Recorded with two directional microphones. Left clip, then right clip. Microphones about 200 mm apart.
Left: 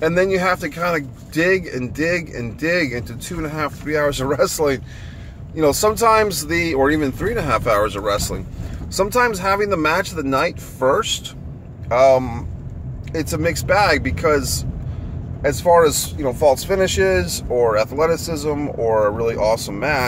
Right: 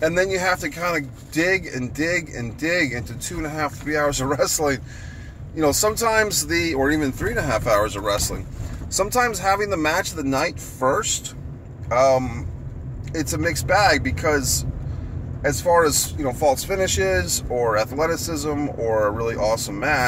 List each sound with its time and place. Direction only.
0.0 s speech: 5° left (ahead or behind)